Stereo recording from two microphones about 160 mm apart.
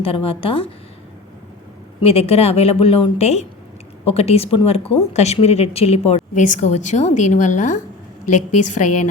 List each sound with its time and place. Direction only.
0.0 s a woman's voice: 35° left (ahead or behind)
2.0 s a woman's voice: 40° left (ahead or behind)